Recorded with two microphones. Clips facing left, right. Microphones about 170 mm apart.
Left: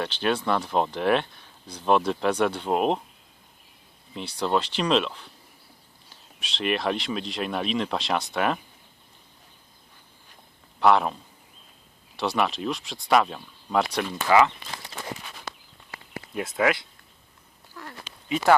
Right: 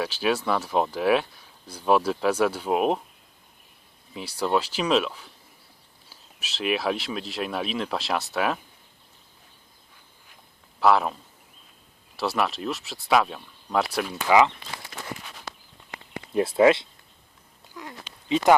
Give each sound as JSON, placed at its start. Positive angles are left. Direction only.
{"t": 0.0, "sound": "speech", "side_deg": -5}
{"t": 4.1, "sound": "speech", "side_deg": -5}
{"t": 10.8, "sound": "a man's voice", "side_deg": 0}
{"t": 14.3, "sound": "speech", "side_deg": -15}
{"t": 16.3, "sound": "speech", "side_deg": -30}
{"t": 17.8, "sound": "a sound", "side_deg": -15}
{"t": 18.3, "sound": "speech", "side_deg": -20}